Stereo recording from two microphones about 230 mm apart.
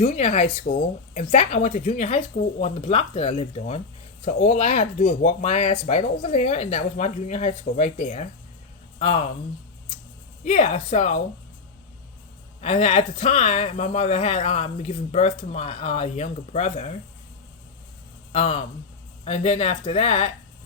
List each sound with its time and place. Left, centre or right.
0.0 s speech: left
10.4 s speech: left
12.6 s speech: left
18.3 s speech: left